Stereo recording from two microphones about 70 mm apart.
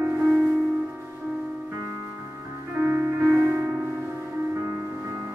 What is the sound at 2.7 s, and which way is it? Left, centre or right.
Music, right.